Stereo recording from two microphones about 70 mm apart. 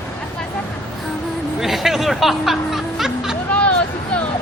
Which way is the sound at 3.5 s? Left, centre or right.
Centre.